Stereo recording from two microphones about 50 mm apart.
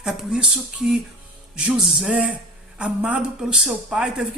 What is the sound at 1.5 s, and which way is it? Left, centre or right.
A woman's voice, right.